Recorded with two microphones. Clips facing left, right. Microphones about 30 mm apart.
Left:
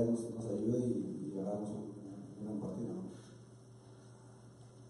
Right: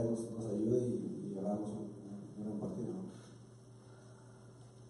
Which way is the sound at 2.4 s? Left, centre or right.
Centre.